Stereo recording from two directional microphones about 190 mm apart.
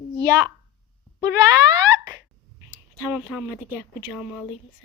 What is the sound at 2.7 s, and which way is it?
Speech, 10° right (ahead or behind).